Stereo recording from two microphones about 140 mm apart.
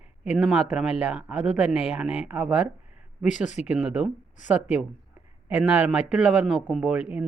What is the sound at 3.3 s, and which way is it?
Speech, 60° left (ahead or behind).